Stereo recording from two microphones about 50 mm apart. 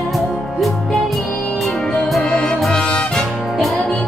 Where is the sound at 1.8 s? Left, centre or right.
Centre.